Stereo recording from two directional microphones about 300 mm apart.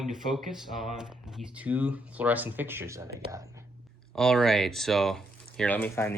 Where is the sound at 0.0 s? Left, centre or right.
Centre.